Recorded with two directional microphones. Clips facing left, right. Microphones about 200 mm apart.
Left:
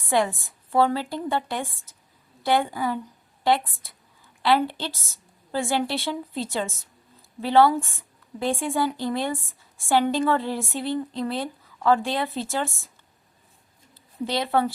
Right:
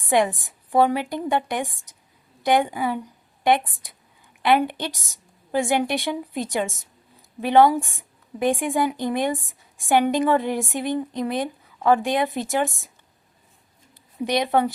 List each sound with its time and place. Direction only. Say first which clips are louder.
0.0 s a woman's voice: right 3 dB; 20° right (ahead or behind)
14.3 s a woman's voice: right 3 dB; 15° right (ahead or behind)